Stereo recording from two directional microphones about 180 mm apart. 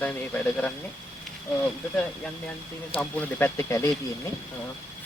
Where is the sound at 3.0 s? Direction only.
10° left (ahead or behind).